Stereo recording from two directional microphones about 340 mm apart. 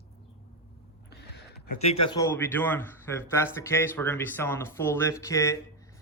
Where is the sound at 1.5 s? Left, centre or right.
Left.